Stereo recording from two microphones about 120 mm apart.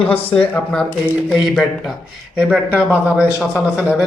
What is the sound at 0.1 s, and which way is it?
A man's voice, 10° left (ahead or behind).